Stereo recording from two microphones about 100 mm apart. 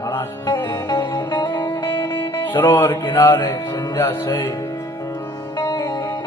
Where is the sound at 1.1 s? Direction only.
45° left (ahead or behind).